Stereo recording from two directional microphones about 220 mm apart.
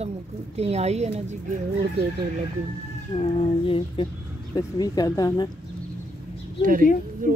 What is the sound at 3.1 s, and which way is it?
A woman's voice, 25° left (ahead or behind).